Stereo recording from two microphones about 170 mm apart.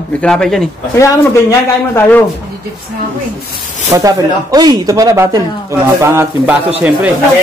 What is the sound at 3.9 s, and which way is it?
Speech, 20° right (ahead or behind).